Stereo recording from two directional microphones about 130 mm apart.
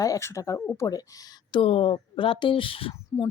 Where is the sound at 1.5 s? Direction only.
45° left (ahead or behind).